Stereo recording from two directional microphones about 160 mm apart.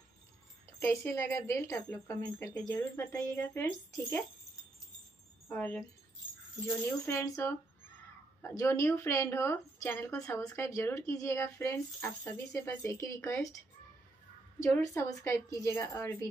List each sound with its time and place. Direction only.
0.7 s speech: 15° left (ahead or behind)
5.5 s speech: 10° left (ahead or behind)
14.6 s speech: 20° left (ahead or behind)